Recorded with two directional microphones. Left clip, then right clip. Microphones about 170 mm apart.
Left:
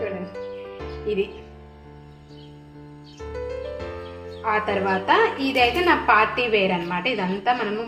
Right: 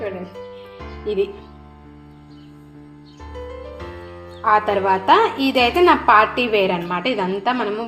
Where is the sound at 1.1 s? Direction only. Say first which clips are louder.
Right 3 dB; 45° right (ahead or behind).